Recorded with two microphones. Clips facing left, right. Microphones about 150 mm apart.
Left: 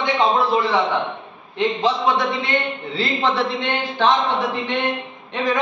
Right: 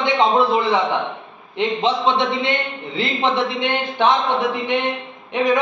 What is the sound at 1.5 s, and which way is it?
A man's voice, 25° right (ahead or behind).